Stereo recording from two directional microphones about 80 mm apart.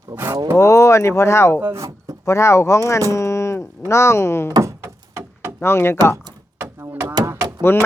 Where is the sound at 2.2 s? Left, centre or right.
Left.